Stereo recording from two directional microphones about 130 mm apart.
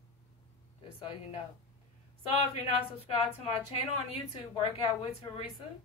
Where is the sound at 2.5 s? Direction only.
50° left (ahead or behind).